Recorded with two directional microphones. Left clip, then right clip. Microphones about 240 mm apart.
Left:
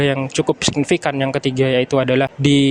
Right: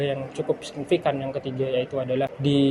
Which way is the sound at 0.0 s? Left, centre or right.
Left.